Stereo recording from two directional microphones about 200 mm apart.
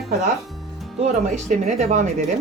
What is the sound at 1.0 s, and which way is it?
Speech, 35° right (ahead or behind).